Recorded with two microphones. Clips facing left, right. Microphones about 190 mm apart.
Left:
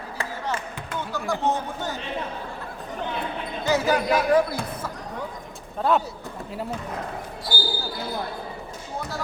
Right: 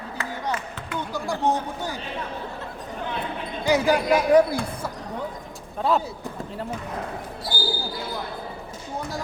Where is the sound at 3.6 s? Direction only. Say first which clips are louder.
Right 2 dB; 15° right (ahead or behind).